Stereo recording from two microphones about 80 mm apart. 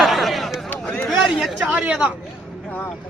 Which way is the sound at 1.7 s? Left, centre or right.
Centre.